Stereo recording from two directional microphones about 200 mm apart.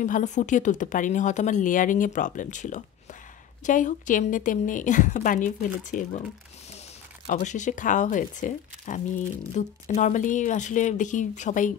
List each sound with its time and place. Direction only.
0.0 s speech: 40° left (ahead or behind)
7.2 s speech: 35° left (ahead or behind)